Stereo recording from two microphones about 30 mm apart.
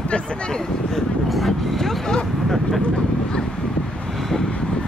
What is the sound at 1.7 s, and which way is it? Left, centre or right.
Speech, centre.